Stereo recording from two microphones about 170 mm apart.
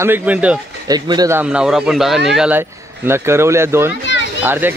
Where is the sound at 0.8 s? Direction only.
25° right (ahead or behind).